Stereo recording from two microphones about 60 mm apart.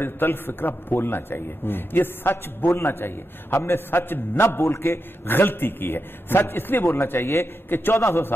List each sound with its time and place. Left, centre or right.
0.0 s a man's voice: left